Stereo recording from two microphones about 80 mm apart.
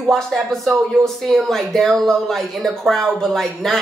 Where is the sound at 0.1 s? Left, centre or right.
Centre.